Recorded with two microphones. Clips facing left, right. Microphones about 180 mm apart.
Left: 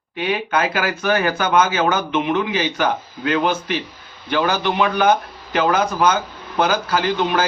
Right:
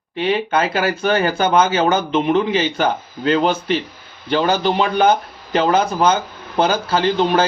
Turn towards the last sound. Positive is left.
turn(degrees=-30)  # may be behind; listen again after turning